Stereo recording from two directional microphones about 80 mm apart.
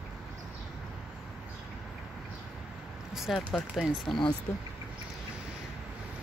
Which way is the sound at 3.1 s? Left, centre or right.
Centre.